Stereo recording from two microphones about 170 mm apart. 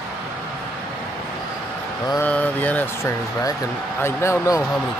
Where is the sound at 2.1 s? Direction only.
10° left (ahead or behind).